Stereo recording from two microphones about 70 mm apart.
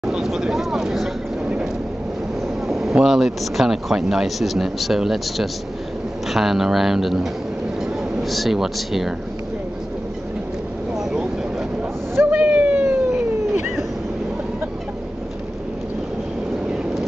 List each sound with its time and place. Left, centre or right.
0.0 s speech: centre
2.7 s speech: centre
11.0 s vehicle: centre
12.3 s a sound: centre